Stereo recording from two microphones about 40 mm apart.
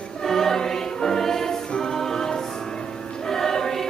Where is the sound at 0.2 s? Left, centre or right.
Centre.